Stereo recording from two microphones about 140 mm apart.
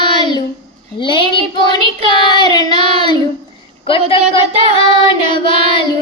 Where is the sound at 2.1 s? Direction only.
30° left (ahead or behind).